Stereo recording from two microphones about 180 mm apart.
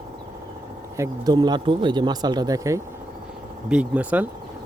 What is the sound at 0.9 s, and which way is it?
Speech, 20° right (ahead or behind).